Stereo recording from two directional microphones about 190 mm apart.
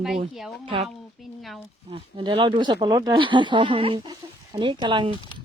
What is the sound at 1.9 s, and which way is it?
Speech, 25° right (ahead or behind).